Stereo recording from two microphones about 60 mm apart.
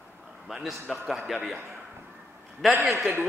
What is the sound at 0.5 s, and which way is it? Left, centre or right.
Speech, centre.